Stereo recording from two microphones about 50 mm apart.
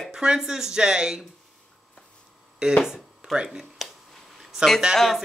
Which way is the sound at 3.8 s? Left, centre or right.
Centre.